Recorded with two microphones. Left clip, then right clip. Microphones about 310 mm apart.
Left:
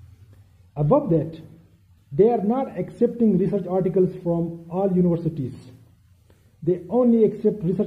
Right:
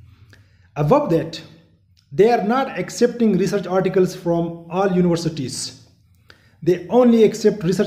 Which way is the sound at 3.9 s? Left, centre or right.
Right.